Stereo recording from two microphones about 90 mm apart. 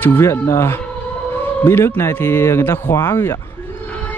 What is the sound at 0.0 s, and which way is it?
Speech, 25° left (ahead or behind).